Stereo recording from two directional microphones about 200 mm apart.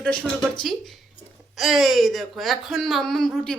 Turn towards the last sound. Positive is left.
turn(degrees=0)  # may be behind; listen again after turning